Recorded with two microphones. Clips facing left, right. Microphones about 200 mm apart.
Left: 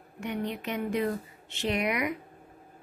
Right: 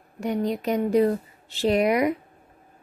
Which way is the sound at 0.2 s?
35° right (ahead or behind).